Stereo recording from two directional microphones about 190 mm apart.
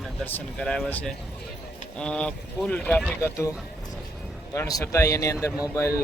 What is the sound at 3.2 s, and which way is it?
Speech, 15° left (ahead or behind).